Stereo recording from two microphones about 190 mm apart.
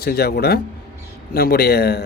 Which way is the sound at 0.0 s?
55° left (ahead or behind).